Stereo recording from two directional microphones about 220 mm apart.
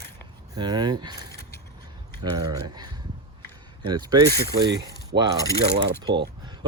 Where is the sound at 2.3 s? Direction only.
15° right (ahead or behind).